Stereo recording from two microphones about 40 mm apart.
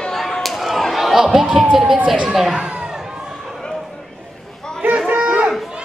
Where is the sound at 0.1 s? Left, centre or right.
Centre.